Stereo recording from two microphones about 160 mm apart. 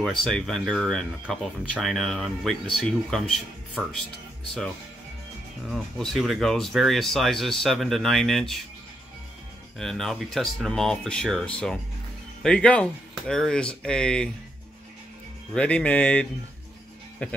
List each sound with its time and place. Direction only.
0.0 s speech: centre (ahead or behind)
5.7 s speech: centre (ahead or behind)
9.8 s speech: centre (ahead or behind)
15.5 s speech: 5° left (ahead or behind)